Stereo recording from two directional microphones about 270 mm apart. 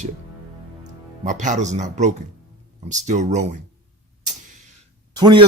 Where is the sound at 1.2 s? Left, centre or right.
Right.